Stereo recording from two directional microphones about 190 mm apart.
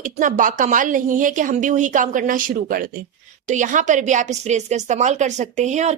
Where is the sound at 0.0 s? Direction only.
45° right (ahead or behind).